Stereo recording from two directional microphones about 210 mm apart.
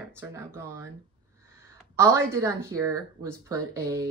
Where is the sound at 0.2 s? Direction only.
15° right (ahead or behind).